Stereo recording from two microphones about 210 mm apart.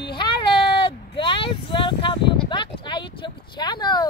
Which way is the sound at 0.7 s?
25° left (ahead or behind).